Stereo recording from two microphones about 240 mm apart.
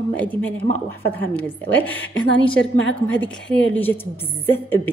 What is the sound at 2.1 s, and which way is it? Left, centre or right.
A woman's voice, left.